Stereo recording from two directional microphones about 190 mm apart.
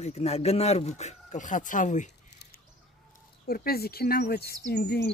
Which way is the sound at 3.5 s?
55° left (ahead or behind).